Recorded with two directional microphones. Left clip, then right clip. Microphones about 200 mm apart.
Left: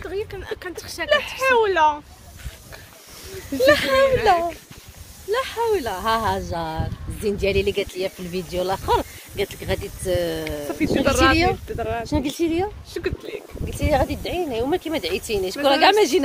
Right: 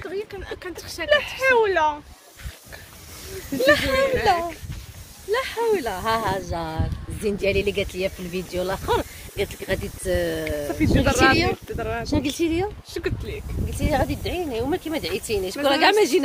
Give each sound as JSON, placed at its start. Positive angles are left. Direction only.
{"t": 0.1, "sound": "speech", "side_deg": 55}
{"t": 1.0, "sound": "speech", "side_deg": 10}
{"t": 3.5, "sound": "speech", "side_deg": 55}
{"t": 5.3, "sound": "speech", "side_deg": 15}
{"t": 10.7, "sound": "speech", "side_deg": 5}
{"t": 12.1, "sound": "speech", "side_deg": 20}
{"t": 12.9, "sound": "speech", "side_deg": -5}
{"t": 13.7, "sound": "speech", "side_deg": 35}
{"t": 14.0, "sound": "speech", "side_deg": 20}